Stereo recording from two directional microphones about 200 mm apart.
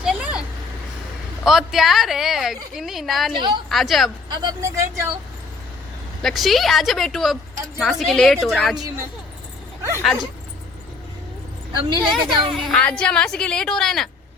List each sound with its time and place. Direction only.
0.0 s vehicle: 5° right (ahead or behind)
1.5 s a woman's voice: centre (ahead or behind)
3.3 s a woman's voice: 20° right (ahead or behind)
3.7 s a woman's voice: centre (ahead or behind)
4.4 s speech: 15° right (ahead or behind)
6.2 s a woman's voice: centre (ahead or behind)
11.8 s a woman's voice: 20° right (ahead or behind)
12.1 s a woman's voice: centre (ahead or behind)